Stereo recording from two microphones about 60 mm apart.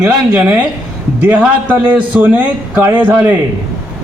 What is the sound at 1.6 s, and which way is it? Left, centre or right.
A man's voice, right.